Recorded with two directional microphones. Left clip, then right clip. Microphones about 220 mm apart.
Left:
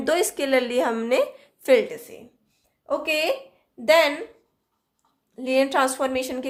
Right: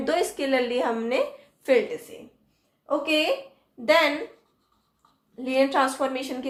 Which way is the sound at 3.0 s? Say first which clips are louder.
Even; 45° left (ahead or behind).